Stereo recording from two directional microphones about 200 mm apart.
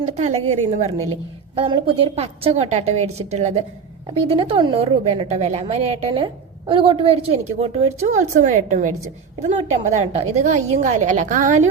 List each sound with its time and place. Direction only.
0.2 s a woman's voice: 30° right (ahead or behind)